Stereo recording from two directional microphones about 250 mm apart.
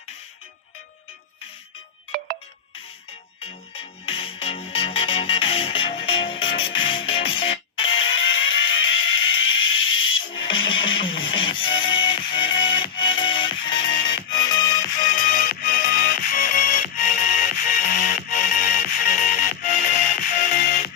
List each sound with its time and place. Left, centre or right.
2.1 s music: right
3.4 s music: left
7.9 s a sound: left
8.6 s music: left
9.6 s fire alarm: left
10.4 s music: centre
15.0 s music: left